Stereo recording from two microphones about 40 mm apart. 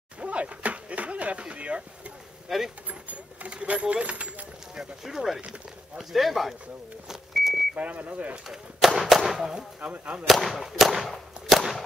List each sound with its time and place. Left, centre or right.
0.2 s a sound: right
2.4 s speech: centre
2.9 s a sound: right
4.7 s speech: centre
7.1 s vehicle: centre
7.7 s speech: right
8.5 s speech: centre
9.8 s speech: right
10.2 s speech: centre